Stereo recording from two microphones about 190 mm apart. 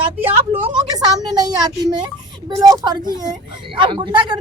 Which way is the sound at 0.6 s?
20° right (ahead or behind).